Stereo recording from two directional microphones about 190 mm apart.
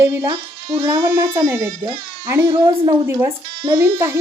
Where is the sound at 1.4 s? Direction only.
5° right (ahead or behind).